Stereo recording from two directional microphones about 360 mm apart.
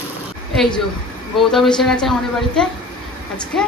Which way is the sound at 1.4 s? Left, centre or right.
Centre.